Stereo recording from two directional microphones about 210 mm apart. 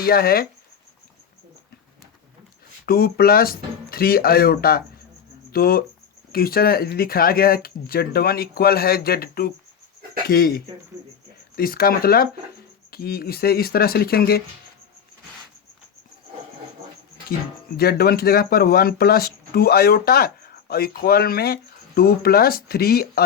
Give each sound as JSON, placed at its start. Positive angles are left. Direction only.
{"t": 0.0, "sound": "speech", "side_deg": 45}
{"t": 2.8, "sound": "speech", "side_deg": 45}
{"t": 17.7, "sound": "speech", "side_deg": 45}